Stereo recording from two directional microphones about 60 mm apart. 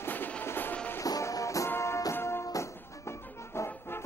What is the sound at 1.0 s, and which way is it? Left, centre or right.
Music, left.